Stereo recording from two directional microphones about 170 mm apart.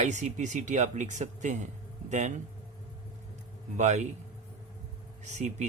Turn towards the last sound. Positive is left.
turn(degrees=-45)  # may be behind; listen again after turning